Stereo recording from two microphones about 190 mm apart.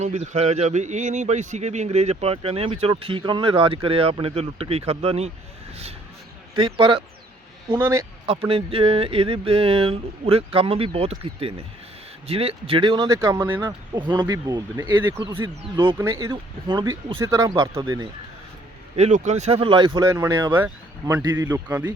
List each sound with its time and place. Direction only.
0.0 s speech: 35° right (ahead or behind)
6.6 s speech: 25° right (ahead or behind)
7.8 s speech: 15° right (ahead or behind)
8.3 s speech: 30° right (ahead or behind)
13.1 s speech: 15° right (ahead or behind)
18.9 s speech: 35° right (ahead or behind); by 21.9 s 10° right (ahead or behind)